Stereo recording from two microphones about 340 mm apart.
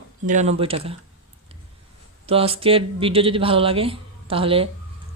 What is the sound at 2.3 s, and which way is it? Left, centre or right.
Speech, centre.